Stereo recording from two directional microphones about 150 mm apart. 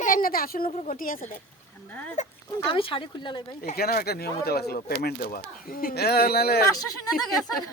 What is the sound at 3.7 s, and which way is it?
Speech, 90° left.